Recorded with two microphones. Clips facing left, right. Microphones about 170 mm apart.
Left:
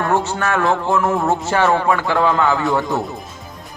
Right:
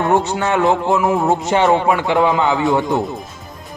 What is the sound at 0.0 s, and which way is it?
A man's voice, 20° right (ahead or behind).